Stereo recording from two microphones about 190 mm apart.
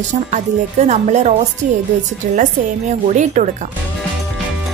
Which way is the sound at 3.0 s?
40° right (ahead or behind).